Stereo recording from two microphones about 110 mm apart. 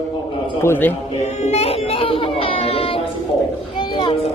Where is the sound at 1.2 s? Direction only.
85° left; by 2.9 s 60° left (ahead or behind).